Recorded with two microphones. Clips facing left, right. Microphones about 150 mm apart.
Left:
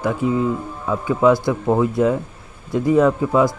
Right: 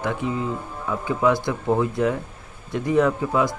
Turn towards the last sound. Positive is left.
turn(degrees=25)  # may be behind; listen again after turning